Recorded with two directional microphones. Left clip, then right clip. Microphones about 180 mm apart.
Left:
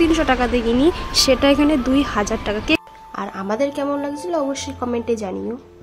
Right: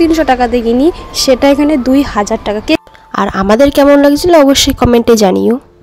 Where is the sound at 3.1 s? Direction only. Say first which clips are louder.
Right 14 dB; 55° right (ahead or behind).